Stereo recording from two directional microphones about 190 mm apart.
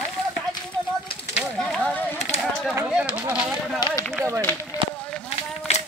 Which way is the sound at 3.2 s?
10° right (ahead or behind).